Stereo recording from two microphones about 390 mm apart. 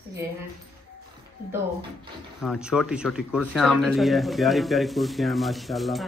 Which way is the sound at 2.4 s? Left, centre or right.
Centre.